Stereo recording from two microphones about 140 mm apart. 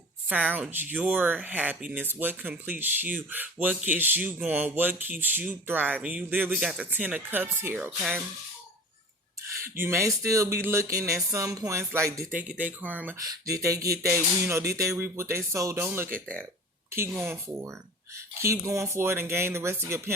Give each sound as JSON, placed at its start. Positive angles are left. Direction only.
{"t": 0.3, "sound": "speech", "side_deg": -10}
{"t": 9.7, "sound": "speech", "side_deg": -15}
{"t": 12.5, "sound": "speech", "side_deg": -10}
{"t": 13.1, "sound": "speech", "side_deg": -25}